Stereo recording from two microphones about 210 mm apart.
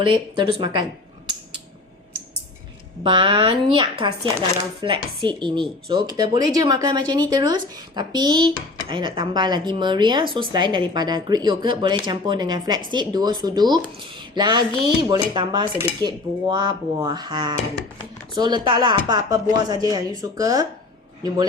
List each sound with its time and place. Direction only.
0.0 s speech: 25° right (ahead or behind)
3.0 s speech: 25° right (ahead or behind)